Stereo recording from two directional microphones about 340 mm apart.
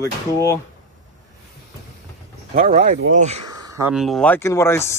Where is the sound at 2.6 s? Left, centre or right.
Right.